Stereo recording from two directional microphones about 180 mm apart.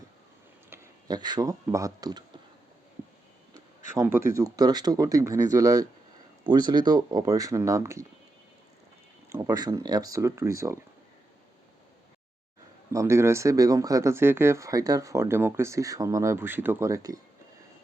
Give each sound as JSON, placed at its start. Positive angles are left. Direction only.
{"t": 0.7, "sound": "speech", "side_deg": -25}
{"t": 3.9, "sound": "speech", "side_deg": -15}
{"t": 9.3, "sound": "speech", "side_deg": -20}
{"t": 12.9, "sound": "speech", "side_deg": -15}